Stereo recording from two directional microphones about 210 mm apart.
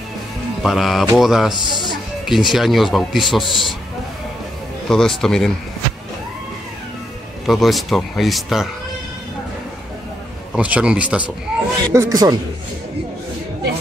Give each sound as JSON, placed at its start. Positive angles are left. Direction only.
{"t": 0.6, "sound": "speech", "side_deg": 0}
{"t": 4.8, "sound": "speech", "side_deg": 0}
{"t": 7.4, "sound": "speech", "side_deg": 0}
{"t": 10.5, "sound": "speech", "side_deg": -5}